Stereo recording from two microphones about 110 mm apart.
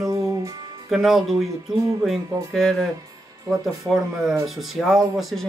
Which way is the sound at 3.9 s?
Centre (ahead or behind).